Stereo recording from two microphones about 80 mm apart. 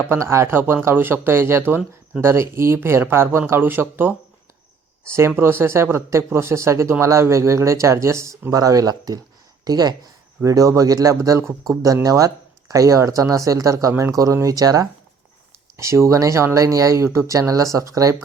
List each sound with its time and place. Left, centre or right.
0.2 s speech: right
5.4 s speech: right
10.4 s speech: right
15.8 s speech: right